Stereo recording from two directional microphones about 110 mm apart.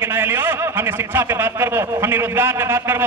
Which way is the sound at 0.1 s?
20° right (ahead or behind).